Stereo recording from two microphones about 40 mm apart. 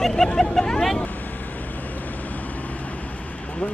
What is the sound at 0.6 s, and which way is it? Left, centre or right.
Vehicle, centre.